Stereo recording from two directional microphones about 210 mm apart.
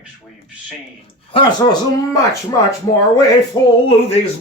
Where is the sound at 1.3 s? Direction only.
20° left (ahead or behind).